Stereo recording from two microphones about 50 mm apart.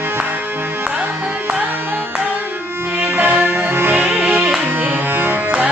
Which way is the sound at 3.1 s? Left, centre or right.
Right.